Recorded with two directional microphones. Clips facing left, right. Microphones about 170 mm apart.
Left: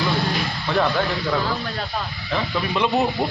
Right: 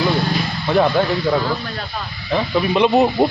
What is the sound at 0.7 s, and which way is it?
Speech, 15° right (ahead or behind).